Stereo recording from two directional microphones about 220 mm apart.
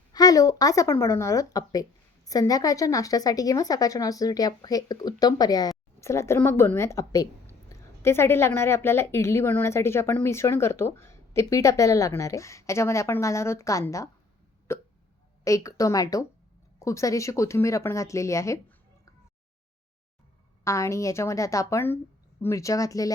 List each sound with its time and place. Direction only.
0.1 s speech: 15° left (ahead or behind)
20.7 s speech: 15° left (ahead or behind)